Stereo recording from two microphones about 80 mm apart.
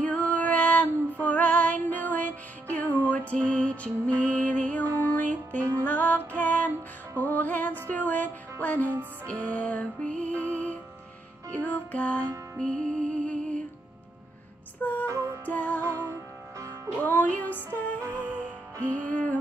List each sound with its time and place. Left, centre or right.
0.0 s female singing: centre
2.7 s music: centre
4.8 s music: right
5.1 s music: left
14.8 s music: left
15.0 s music: right
15.4 s music: centre
15.8 s music: right
17.0 s music: left
18.1 s music: centre
18.9 s music: centre